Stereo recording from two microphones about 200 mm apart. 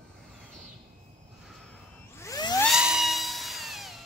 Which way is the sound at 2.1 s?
15° left (ahead or behind).